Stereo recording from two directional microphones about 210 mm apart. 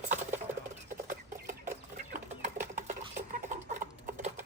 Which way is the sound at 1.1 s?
40° right (ahead or behind).